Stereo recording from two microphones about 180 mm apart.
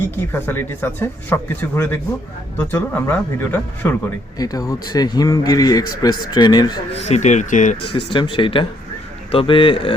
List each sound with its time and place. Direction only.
0.0 s speech: 10° left (ahead or behind)
7.0 s speech: 40° left (ahead or behind)
8.1 s speech: 25° left (ahead or behind)